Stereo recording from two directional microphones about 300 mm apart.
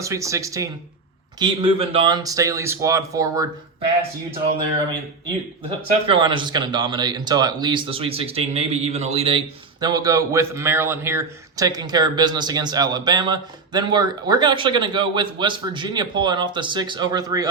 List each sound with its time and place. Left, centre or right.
0.0 s speech: centre
6.1 s speech: centre